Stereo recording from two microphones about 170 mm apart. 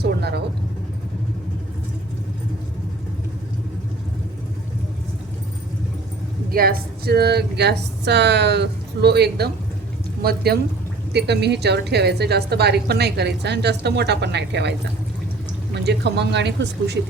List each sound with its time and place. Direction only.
0.0 s vehicle: 75° right (ahead or behind)
6.5 s a woman's voice: 60° right (ahead or behind)
11.1 s a woman's voice: 80° right